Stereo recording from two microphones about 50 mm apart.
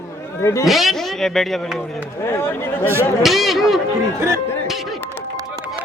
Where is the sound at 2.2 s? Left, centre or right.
Left.